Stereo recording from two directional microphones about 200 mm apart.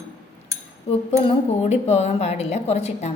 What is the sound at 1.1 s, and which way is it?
A woman's voice, 30° left (ahead or behind).